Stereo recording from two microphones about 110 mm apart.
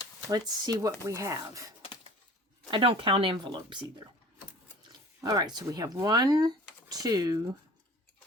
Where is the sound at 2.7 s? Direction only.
50° right (ahead or behind).